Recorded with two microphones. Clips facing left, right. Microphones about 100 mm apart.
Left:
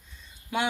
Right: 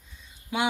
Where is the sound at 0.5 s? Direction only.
15° right (ahead or behind).